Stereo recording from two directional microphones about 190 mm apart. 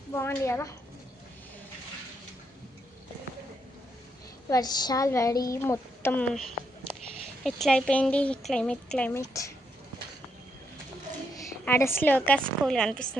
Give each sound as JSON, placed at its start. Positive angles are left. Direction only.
{"t": 0.1, "sound": "a woman's voice", "side_deg": 15}
{"t": 4.4, "sound": "a woman's voice", "side_deg": 20}
{"t": 7.4, "sound": "speech", "side_deg": 5}
{"t": 11.6, "sound": "a woman's voice", "side_deg": 10}